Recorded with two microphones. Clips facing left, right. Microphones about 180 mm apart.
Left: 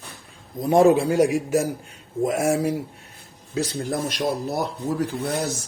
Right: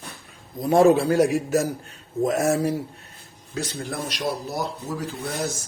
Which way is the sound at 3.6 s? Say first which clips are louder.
Left 5 dB; 35° left (ahead or behind).